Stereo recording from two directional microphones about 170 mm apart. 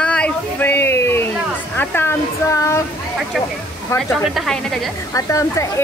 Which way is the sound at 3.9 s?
15° left (ahead or behind).